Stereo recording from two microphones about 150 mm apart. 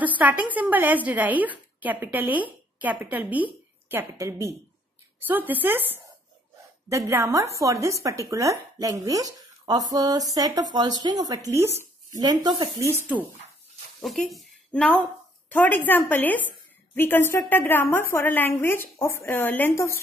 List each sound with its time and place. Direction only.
0.2 s a woman's voice: 10° right (ahead or behind)
14.0 s a woman's voice: centre (ahead or behind); by 20.0 s 15° left (ahead or behind)